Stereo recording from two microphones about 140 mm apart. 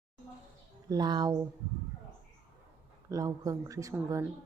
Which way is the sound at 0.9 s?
30° right (ahead or behind).